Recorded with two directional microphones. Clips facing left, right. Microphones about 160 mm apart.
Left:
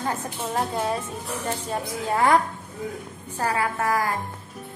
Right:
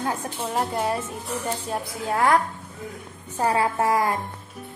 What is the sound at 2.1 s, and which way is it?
Speech, centre (ahead or behind).